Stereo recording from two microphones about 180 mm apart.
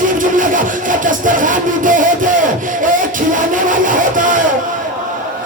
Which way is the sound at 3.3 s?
45° right (ahead or behind).